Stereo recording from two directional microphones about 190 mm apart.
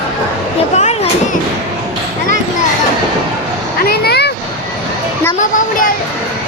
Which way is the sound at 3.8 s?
55° left (ahead or behind).